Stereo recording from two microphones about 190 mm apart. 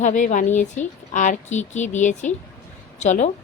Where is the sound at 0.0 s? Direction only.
40° left (ahead or behind).